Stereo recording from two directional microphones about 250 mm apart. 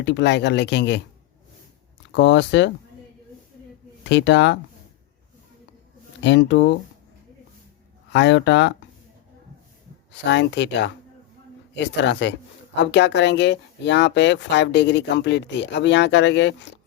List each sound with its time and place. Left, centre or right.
0.0 s speech: left
2.1 s speech: left
4.0 s speech: left
6.2 s speech: left
8.1 s speech: left
10.1 s speech: left